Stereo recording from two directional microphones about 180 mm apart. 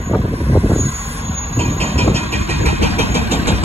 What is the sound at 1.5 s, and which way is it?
Vehicle, 35° right (ahead or behind).